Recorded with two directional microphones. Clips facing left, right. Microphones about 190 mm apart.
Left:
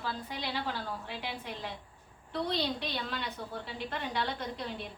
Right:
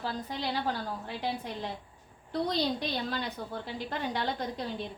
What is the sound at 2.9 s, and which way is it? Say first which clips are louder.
A woman's voice: right 3 dB; 35° right (ahead or behind).